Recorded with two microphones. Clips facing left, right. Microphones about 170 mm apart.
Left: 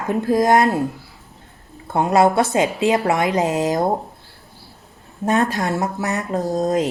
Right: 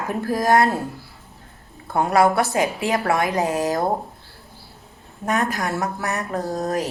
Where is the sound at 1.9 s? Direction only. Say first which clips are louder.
Left 2 dB; 20° left (ahead or behind).